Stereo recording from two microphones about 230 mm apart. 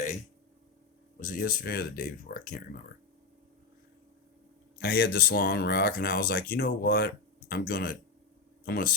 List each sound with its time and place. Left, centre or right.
1.2 s speech: left
4.8 s speech: left